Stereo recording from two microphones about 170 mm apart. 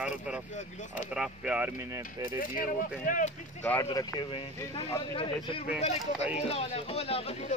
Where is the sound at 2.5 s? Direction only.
55° left (ahead or behind).